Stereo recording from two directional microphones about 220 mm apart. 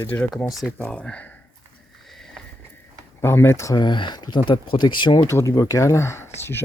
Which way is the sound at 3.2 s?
10° left (ahead or behind).